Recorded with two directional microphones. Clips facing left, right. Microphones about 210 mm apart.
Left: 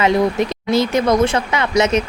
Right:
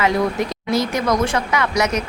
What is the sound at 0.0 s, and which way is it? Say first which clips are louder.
Speech: left 3 dB; 20° left (ahead or behind).